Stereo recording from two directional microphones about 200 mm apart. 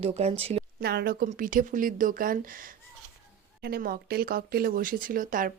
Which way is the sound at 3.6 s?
50° right (ahead or behind).